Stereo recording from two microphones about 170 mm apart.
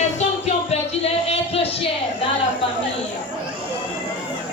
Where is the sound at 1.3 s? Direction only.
35° left (ahead or behind).